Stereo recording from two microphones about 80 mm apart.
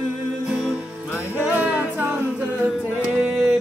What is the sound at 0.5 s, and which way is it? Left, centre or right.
Music, centre.